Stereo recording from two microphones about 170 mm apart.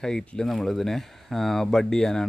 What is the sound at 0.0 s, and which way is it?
Speech, 5° left (ahead or behind).